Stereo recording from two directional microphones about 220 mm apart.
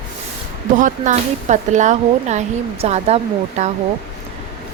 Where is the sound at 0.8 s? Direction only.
35° right (ahead or behind).